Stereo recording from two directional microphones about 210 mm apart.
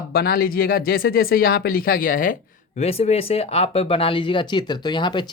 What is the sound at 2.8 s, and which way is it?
Speech, 30° left (ahead or behind).